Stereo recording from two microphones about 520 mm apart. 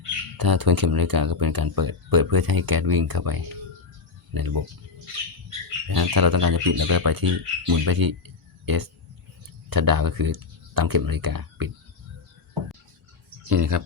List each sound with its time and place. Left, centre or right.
0.3 s speech: right
5.9 s speech: right
13.5 s speech: right